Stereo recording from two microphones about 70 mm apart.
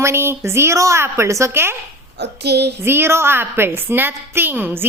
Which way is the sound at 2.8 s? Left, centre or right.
Right.